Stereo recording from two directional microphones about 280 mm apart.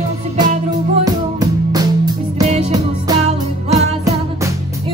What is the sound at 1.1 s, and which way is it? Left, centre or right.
Music, centre.